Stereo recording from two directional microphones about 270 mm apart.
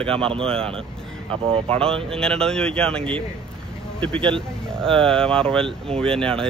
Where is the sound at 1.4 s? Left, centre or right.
Centre.